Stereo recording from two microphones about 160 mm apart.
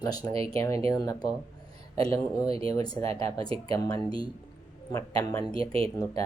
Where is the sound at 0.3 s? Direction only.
35° right (ahead or behind).